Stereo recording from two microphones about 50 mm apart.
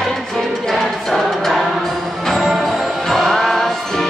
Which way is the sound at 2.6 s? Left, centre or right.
Centre.